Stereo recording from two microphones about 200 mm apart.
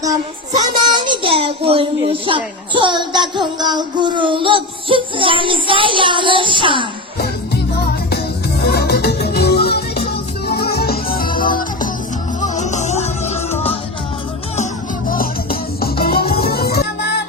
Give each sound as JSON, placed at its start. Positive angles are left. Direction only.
{"t": 0.5, "sound": "a child's voice", "side_deg": -20}
{"t": 7.2, "sound": "music", "side_deg": 50}
{"t": 11.3, "sound": "music", "side_deg": 25}
{"t": 12.4, "sound": "music", "side_deg": 35}
{"t": 15.1, "sound": "music", "side_deg": 45}